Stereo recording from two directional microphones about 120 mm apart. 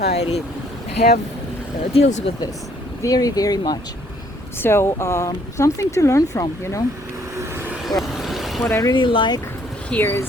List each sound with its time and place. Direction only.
0.1 s speech: 60° left (ahead or behind)
1.9 s speech: 70° left (ahead or behind)
3.0 s speech: 30° left (ahead or behind)
4.6 s speech: 20° left (ahead or behind)
7.3 s vehicle: 15° right (ahead or behind)
7.9 s vehicle: centre (ahead or behind)
8.6 s speech: 20° left (ahead or behind)
8.9 s speech: 45° left (ahead or behind)
9.9 s speech: 20° left (ahead or behind)